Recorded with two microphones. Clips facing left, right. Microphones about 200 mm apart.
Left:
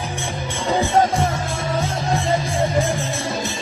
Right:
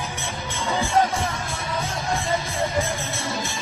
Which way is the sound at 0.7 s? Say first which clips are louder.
Left 4 dB; 25° left (ahead or behind).